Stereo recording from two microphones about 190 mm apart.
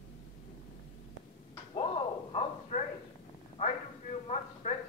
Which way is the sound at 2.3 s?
35° left (ahead or behind).